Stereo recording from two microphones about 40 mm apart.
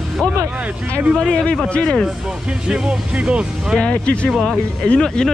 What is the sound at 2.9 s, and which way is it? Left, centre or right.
Speech, right.